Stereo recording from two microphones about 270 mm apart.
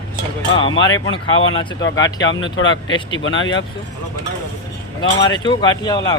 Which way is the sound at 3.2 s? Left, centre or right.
Left.